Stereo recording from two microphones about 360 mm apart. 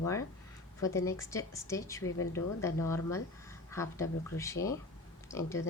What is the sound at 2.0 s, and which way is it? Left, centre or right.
Speech, left.